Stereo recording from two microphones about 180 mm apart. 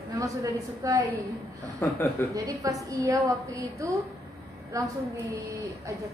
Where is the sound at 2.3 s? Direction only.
20° right (ahead or behind).